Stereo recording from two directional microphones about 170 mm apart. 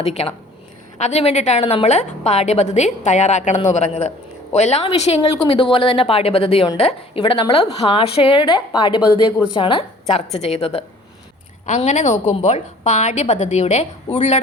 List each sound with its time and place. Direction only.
0.0 s a woman's voice: 35° left (ahead or behind)
11.6 s a woman's voice: 45° left (ahead or behind)